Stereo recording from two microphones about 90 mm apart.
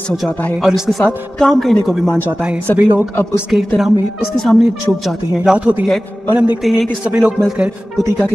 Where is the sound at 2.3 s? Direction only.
15° right (ahead or behind).